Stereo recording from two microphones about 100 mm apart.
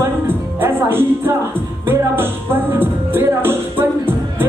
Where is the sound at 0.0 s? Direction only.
20° right (ahead or behind).